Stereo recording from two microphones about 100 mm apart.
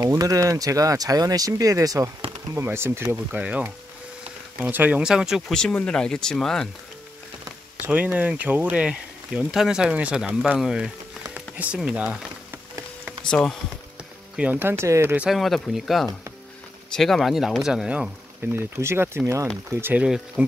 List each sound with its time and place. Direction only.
0.0 s speech: 35° right (ahead or behind)
3.3 s speech: 15° right (ahead or behind)
4.6 s speech: 15° right (ahead or behind)
5.5 s speech: 5° left (ahead or behind)
7.8 s speech: 15° right (ahead or behind)
13.2 s speech: 5° left (ahead or behind)
14.3 s speech: 15° right (ahead or behind)
15.2 s speech: centre (ahead or behind)
18.6 s speech: 25° right (ahead or behind)